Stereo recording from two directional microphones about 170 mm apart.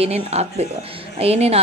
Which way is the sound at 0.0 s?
40° right (ahead or behind).